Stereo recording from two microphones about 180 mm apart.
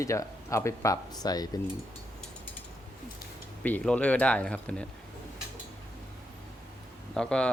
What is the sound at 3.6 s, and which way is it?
Speech, 5° left (ahead or behind).